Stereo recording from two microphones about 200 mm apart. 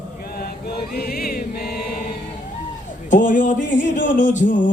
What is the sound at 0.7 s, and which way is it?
Chant, 50° left (ahead or behind).